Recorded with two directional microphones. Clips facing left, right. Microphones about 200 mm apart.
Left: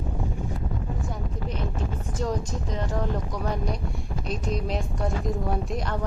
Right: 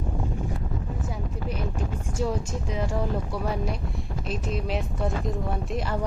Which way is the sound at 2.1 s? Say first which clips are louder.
Right 1 dB; 10° right (ahead or behind).